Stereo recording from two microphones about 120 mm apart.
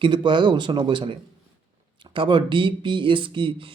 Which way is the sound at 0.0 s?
40° right (ahead or behind).